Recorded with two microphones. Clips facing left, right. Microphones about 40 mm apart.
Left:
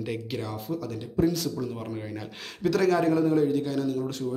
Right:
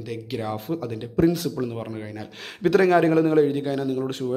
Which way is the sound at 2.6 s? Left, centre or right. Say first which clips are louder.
Right 5 dB; right.